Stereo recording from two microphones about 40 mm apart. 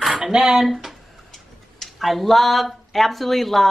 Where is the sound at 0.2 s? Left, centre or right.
Centre.